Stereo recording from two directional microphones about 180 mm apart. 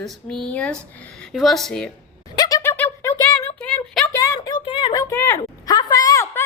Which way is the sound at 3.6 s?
5° left (ahead or behind).